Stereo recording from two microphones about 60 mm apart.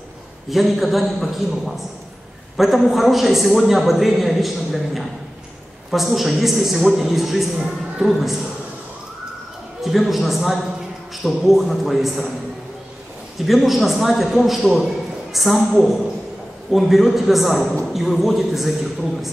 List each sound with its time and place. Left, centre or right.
0.5 s a man's voice: centre
9.8 s a man's voice: centre
13.5 s a man's voice: centre